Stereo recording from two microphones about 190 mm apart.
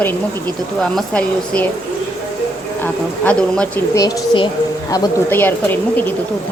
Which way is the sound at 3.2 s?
5° left (ahead or behind).